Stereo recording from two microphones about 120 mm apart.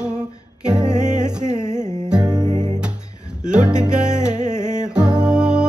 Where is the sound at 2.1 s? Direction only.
5° right (ahead or behind).